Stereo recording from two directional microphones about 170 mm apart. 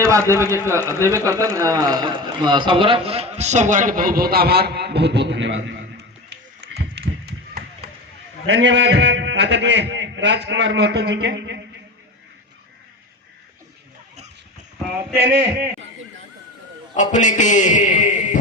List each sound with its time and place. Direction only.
0.1 s speech: 15° right (ahead or behind); by 5.7 s 90° right
6.3 s run: 75° right (ahead or behind)
8.4 s a man's voice: 90° right
16.9 s a man's voice: 45° left (ahead or behind)